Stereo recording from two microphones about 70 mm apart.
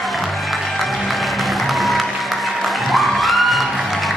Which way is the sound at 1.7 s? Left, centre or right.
Centre.